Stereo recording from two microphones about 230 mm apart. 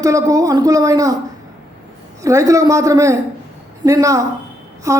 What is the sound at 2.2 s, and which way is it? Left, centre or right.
A man's voice, centre.